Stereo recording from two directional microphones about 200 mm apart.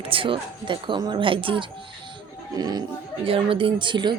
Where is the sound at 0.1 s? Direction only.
25° right (ahead or behind).